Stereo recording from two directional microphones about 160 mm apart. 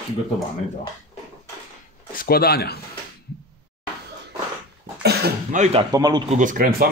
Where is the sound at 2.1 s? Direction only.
70° left (ahead or behind).